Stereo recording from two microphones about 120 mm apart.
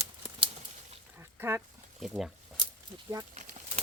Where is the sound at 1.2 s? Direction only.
20° right (ahead or behind).